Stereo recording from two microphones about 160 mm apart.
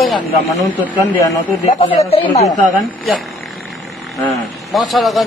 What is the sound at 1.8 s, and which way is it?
Speech, 40° left (ahead or behind).